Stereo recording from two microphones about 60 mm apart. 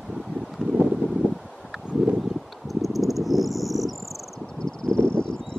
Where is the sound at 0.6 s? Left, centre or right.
Centre.